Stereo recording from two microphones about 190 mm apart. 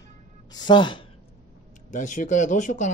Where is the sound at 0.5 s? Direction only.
25° left (ahead or behind).